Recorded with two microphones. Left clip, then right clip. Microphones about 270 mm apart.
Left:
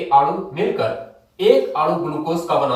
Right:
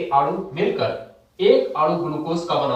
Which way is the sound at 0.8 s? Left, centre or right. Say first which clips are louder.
Left 2 dB; centre.